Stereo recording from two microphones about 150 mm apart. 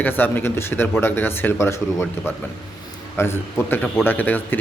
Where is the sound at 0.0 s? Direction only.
15° left (ahead or behind).